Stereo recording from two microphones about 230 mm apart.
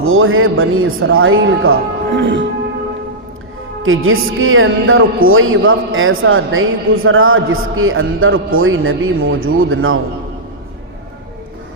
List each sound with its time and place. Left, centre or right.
0.0 s a man's voice: right
2.0 s music: right
3.8 s a man's voice: right